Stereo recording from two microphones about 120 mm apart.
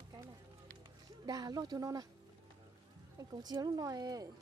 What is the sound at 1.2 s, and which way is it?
Speech, 35° right (ahead or behind).